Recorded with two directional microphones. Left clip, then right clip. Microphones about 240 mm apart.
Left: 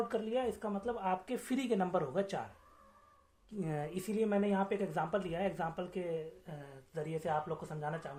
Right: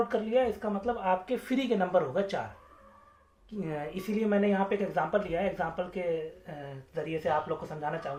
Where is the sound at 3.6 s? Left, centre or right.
Left.